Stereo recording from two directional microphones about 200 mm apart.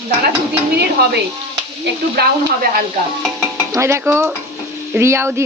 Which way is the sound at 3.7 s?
15° right (ahead or behind).